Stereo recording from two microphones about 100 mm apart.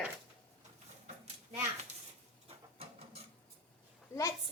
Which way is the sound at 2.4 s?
75° right (ahead or behind).